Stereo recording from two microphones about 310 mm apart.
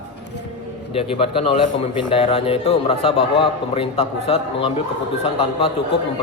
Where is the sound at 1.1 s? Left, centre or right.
Centre.